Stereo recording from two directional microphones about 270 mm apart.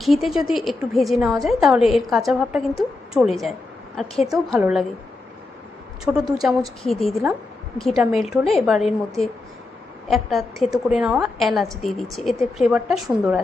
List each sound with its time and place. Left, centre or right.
0.0 s a woman's voice: centre
6.1 s a woman's voice: centre